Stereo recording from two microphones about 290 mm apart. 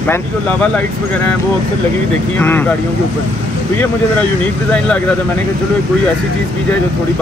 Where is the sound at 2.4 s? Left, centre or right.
Centre.